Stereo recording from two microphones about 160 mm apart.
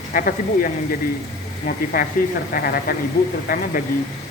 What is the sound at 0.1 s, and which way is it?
Speech, 60° left (ahead or behind).